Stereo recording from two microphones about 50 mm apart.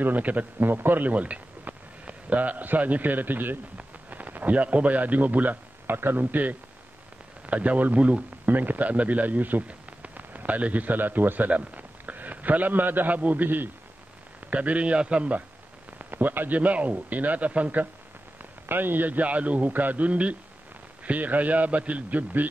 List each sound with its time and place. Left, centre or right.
0.0 s a man's voice: right
16.0 s a man's voice: right
18.7 s a man's voice: right